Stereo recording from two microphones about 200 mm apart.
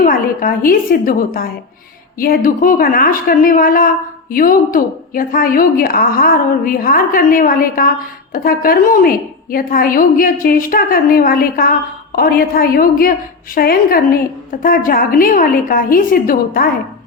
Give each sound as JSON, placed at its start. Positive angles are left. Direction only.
{"t": 0.0, "sound": "a woman's voice", "side_deg": 45}